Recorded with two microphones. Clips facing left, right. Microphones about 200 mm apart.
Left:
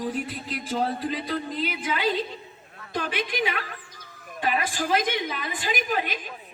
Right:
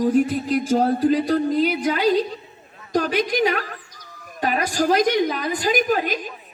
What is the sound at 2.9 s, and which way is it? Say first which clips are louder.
A woman's voice: right 8 dB; 40° right (ahead or behind).